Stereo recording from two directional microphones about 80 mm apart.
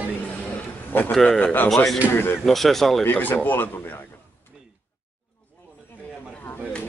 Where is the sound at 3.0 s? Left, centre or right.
Left.